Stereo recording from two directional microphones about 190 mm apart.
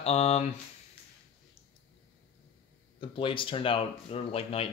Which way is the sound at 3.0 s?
25° left (ahead or behind).